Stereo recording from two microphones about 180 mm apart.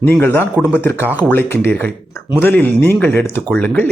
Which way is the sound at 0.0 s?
10° left (ahead or behind).